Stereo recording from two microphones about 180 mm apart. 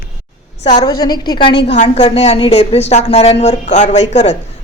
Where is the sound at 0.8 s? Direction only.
20° left (ahead or behind).